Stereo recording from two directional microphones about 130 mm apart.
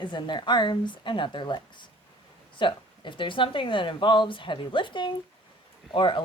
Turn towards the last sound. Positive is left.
turn(degrees=40)  # may be behind; listen again after turning